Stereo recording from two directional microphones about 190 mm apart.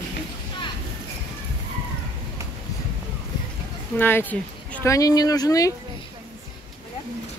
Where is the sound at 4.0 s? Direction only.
10° left (ahead or behind).